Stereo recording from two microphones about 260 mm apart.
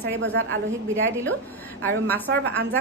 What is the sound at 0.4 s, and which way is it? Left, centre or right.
Speech, right.